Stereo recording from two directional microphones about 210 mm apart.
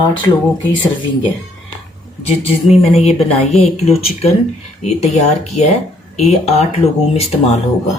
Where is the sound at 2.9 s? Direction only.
30° left (ahead or behind).